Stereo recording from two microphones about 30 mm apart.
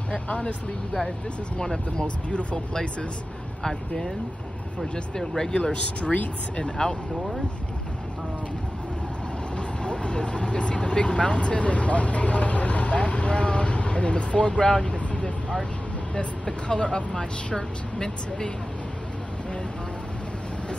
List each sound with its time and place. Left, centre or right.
0.1 s vehicle: left
1.6 s speech: centre
3.6 s speech: centre
5.5 s speech: left
6.6 s speech: left
9.6 s speech: left
14.9 s vehicle: left
16.6 s speech: left